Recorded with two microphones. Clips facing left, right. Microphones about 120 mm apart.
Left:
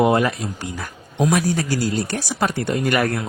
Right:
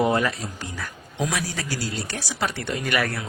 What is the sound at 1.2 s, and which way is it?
Speech, 45° left (ahead or behind).